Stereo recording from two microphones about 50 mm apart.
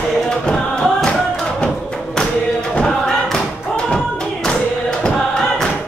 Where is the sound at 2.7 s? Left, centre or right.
Centre.